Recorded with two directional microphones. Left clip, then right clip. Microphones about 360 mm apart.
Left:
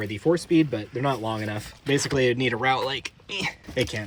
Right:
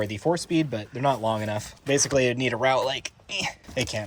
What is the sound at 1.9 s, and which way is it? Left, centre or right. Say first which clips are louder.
Speech: even; centre.